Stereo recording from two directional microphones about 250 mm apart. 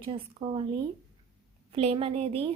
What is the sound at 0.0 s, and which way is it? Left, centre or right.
Speech, right.